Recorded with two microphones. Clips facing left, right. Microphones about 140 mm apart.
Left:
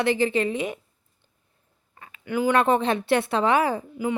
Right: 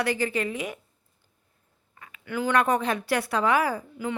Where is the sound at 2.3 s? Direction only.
20° left (ahead or behind).